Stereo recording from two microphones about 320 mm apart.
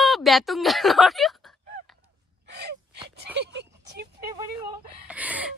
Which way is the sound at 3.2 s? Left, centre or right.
Right.